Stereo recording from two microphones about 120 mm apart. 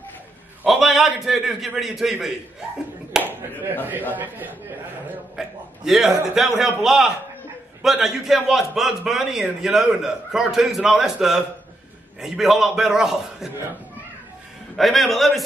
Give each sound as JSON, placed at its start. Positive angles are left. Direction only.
{"t": 0.7, "sound": "a man's voice", "side_deg": 0}
{"t": 3.1, "sound": "clapping", "side_deg": -15}
{"t": 4.1, "sound": "a man's voice", "side_deg": -15}
{"t": 5.3, "sound": "a man's voice", "side_deg": -5}
{"t": 14.8, "sound": "a man's voice", "side_deg": 0}